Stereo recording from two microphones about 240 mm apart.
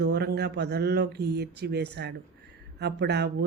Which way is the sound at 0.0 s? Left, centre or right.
Right.